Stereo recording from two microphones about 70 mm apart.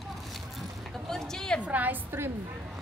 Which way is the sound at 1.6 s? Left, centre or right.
Right.